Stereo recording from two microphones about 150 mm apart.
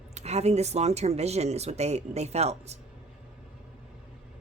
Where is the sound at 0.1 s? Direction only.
45° right (ahead or behind).